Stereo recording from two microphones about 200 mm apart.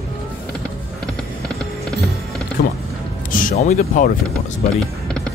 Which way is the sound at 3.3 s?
40° left (ahead or behind).